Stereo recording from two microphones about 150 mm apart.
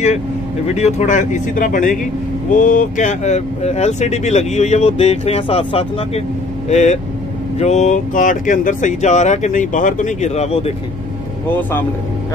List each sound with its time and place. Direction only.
0.7 s speech: 50° left (ahead or behind)
6.7 s speech: 50° left (ahead or behind)